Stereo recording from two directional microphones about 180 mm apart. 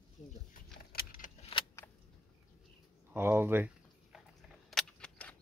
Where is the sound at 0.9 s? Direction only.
50° left (ahead or behind).